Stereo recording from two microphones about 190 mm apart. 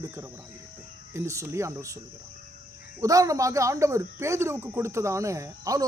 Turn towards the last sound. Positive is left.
turn(degrees=-15)  # may be behind; listen again after turning